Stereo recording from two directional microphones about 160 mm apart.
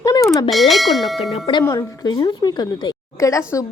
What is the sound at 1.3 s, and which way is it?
A woman's voice, 30° left (ahead or behind).